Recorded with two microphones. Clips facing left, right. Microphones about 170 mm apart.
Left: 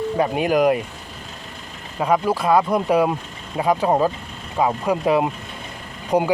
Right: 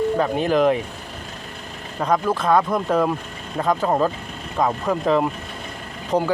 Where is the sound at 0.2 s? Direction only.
10° left (ahead or behind).